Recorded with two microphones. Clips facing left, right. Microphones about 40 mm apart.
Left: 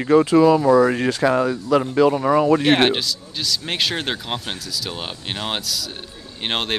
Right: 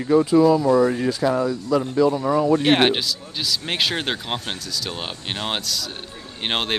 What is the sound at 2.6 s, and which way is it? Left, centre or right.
Speech, centre.